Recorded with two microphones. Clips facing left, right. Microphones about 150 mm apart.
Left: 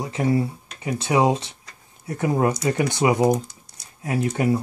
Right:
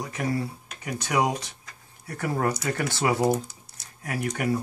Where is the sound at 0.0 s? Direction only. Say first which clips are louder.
Left 6 dB; 25° left (ahead or behind).